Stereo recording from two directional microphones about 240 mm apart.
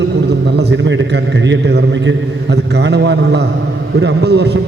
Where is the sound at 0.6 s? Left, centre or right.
Right.